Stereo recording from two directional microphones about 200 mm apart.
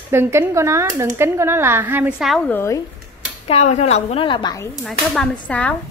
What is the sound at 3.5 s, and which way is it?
A woman's voice, 35° left (ahead or behind).